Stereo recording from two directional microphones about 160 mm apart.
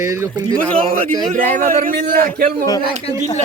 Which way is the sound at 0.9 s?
60° right (ahead or behind).